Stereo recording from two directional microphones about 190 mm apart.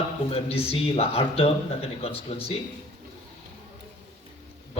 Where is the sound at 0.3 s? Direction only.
30° left (ahead or behind).